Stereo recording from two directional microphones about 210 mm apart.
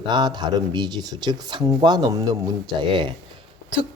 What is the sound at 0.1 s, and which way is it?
Speech, 20° right (ahead or behind).